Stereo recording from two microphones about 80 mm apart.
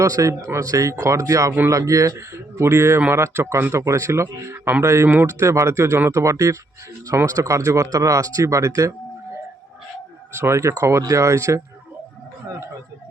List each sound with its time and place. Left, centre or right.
0.0 s speech: right
10.3 s speech: right